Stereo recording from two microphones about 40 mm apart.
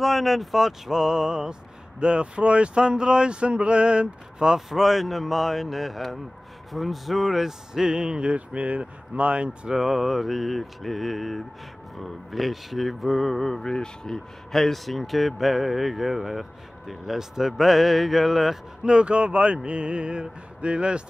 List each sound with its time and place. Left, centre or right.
0.0 s speech: centre; by 4.6 s right
4.6 s speech: centre; by 8.4 s right
8.4 s speech: right
9.8 s speech: centre
18.9 s speech: right